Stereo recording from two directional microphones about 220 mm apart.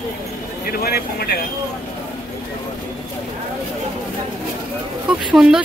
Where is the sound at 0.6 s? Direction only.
45° left (ahead or behind).